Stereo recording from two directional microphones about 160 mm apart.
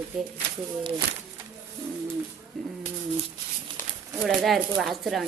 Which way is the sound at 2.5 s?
5° left (ahead or behind).